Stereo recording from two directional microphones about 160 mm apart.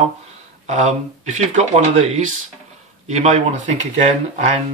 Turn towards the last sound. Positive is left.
turn(degrees=-40)  # may be behind; listen again after turning